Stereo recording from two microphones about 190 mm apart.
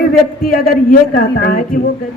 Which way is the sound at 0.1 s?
50° left (ahead or behind).